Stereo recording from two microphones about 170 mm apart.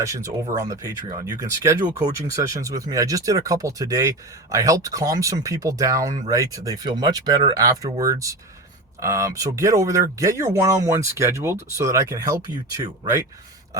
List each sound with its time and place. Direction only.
0.0 s speech: 20° right (ahead or behind)